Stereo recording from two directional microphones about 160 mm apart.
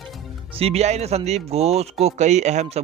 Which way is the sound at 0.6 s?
40° right (ahead or behind).